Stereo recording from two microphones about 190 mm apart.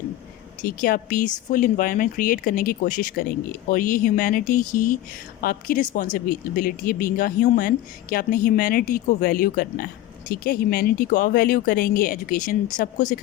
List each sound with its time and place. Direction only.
0.6 s speech: 45° left (ahead or behind)